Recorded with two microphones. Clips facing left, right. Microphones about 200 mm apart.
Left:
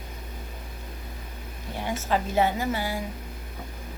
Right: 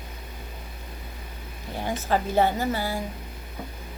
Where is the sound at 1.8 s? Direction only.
35° right (ahead or behind).